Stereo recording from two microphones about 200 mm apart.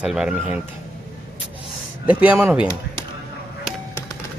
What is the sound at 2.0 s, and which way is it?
Speech, 5° right (ahead or behind).